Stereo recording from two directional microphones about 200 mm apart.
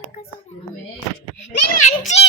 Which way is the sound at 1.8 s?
35° left (ahead or behind).